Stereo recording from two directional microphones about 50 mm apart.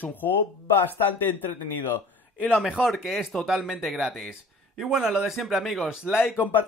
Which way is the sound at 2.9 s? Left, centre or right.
Centre.